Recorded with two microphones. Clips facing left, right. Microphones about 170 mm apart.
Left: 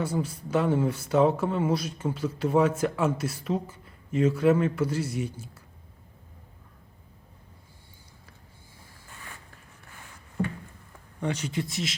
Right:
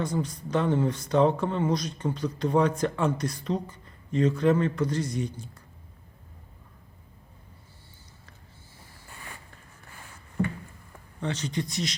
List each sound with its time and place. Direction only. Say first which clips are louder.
0.0 s speech: even; 10° left (ahead or behind)
11.2 s speech: left 1 dB; 10° left (ahead or behind)